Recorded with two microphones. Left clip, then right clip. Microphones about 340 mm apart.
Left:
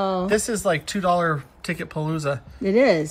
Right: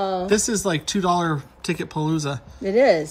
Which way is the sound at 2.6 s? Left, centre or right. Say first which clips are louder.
Right 1 dB; centre.